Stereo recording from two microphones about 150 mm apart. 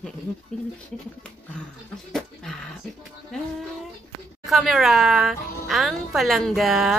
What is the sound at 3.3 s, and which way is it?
Speech, 5° left (ahead or behind).